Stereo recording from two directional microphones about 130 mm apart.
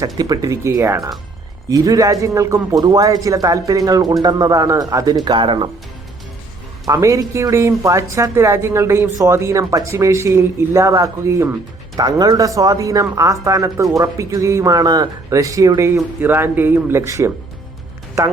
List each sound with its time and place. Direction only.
0.2 s speech: 25° right (ahead or behind)
6.8 s a man's voice: 25° right (ahead or behind)